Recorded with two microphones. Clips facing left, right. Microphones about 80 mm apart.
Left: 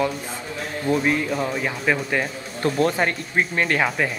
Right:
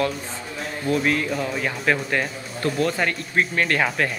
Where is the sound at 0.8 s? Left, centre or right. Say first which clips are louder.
Left 1 dB; left.